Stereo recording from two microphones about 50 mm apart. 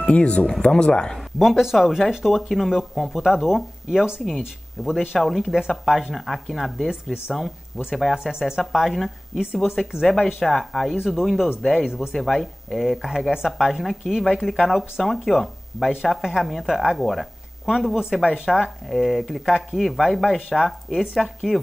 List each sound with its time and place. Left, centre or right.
0.0 s speech: left
1.4 s speech: centre
6.9 s speech: centre
7.3 s speech: centre
8.2 s speech: centre
8.5 s speech: centre
11.9 s speech: centre
12.2 s speech: centre